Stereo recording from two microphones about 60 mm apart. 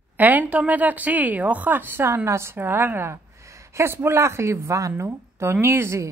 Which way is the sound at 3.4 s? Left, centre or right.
Right.